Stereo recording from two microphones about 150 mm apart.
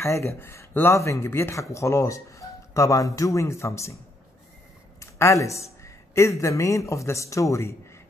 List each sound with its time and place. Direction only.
0.0 s speech: 20° left (ahead or behind)
5.0 s speech: 20° left (ahead or behind)